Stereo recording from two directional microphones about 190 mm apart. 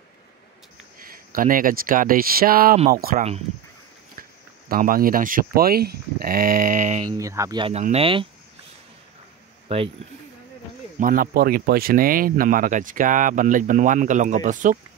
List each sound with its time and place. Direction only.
0.9 s speech: 50° right (ahead or behind)
7.2 s speech: 15° right (ahead or behind)
11.0 s speech: 50° right (ahead or behind)